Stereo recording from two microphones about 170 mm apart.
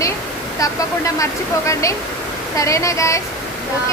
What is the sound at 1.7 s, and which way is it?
Speech, 20° left (ahead or behind).